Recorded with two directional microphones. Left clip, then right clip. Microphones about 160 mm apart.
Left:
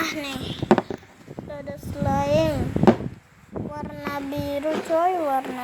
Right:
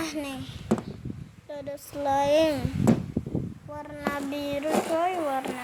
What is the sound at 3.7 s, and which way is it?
Child singing, 35° left (ahead or behind).